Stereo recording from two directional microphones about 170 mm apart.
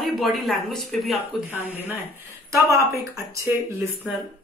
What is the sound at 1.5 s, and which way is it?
Speech, 10° right (ahead or behind).